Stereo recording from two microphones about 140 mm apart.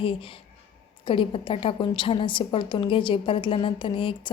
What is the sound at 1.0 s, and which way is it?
A woman's voice, 35° left (ahead or behind).